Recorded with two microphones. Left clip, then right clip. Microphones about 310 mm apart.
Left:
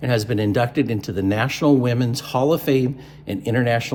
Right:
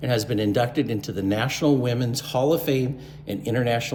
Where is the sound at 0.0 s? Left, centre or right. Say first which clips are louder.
Left 2 dB; left.